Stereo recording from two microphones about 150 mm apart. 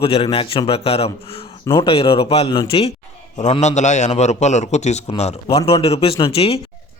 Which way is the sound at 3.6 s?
50° left (ahead or behind).